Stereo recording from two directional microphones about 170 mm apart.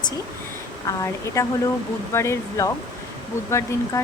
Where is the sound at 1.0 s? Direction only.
15° left (ahead or behind).